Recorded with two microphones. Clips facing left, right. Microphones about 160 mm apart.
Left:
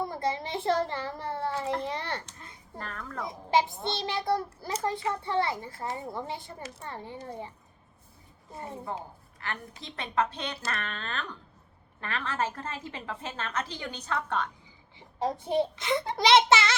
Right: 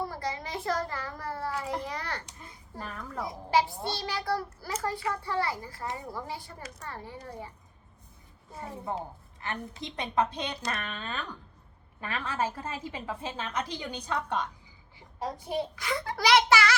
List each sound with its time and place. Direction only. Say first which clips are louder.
0.0 s a child's voice: left 3 dB; 25° left (ahead or behind)
2.2 s a woman's voice: even; 5° right (ahead or behind)
3.2 s a child's voice: left 1 dB; 20° left (ahead or behind)
9.4 s a woman's voice: right 2 dB; 20° right (ahead or behind)
14.9 s a child's voice: left 5 dB; 25° left (ahead or behind)